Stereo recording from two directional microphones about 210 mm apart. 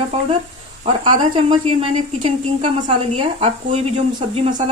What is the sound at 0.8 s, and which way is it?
A woman's voice, 30° right (ahead or behind).